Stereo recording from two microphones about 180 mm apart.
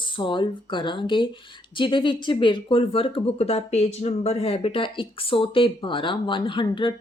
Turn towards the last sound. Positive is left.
turn(degrees=25)  # may be behind; listen again after turning